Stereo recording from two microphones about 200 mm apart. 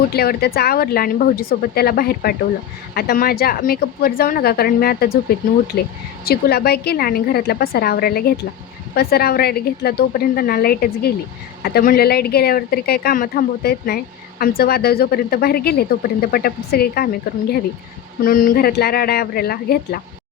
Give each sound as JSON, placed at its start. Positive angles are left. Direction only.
{"t": 0.1, "sound": "speech", "side_deg": 50}
{"t": 6.2, "sound": "speech", "side_deg": 50}